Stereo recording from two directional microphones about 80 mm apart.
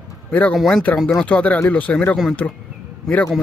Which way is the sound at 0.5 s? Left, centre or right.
Centre.